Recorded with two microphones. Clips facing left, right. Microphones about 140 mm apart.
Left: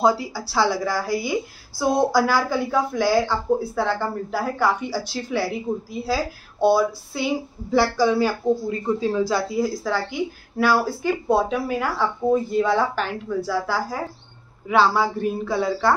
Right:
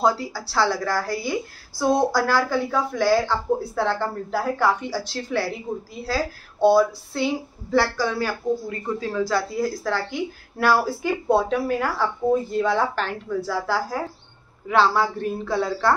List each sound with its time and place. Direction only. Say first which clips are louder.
0.0 s a woman's voice: left 2 dB; 10° left (ahead or behind)
6.6 s a woman's voice: right 1 dB; 5° left (ahead or behind)